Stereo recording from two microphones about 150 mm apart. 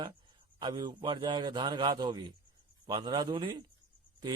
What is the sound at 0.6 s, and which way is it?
A man's voice, 25° right (ahead or behind).